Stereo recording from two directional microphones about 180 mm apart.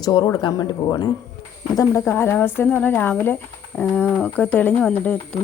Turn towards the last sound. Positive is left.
turn(degrees=5)  # may be behind; listen again after turning